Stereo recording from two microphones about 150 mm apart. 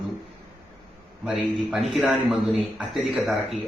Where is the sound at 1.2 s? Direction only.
5° right (ahead or behind).